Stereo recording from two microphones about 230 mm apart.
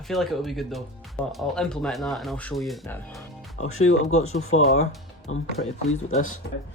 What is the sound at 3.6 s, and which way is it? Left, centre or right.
Speech, left.